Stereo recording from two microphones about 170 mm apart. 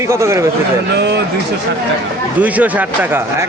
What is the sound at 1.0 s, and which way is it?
Speech, 90° right.